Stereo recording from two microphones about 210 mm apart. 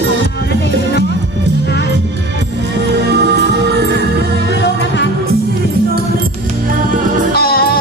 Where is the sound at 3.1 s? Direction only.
55° right (ahead or behind).